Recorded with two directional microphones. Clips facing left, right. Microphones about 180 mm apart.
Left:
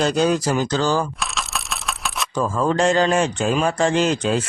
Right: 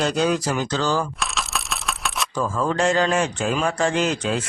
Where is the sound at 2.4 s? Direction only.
30° left (ahead or behind).